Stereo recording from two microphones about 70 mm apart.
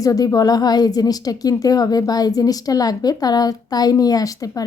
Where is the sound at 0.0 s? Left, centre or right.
Left.